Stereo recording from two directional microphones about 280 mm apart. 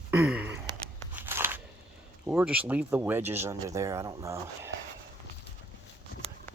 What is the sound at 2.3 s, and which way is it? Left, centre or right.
Speech, centre.